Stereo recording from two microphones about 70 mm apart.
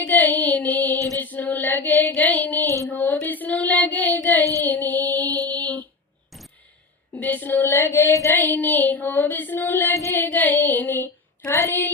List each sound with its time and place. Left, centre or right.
0.0 s child singing: left
1.2 s female singing: left
2.4 s a sound: left
2.9 s child singing: left
7.2 s a sound: left
8.3 s female singing: left
9.9 s music: left
10.2 s female singing: left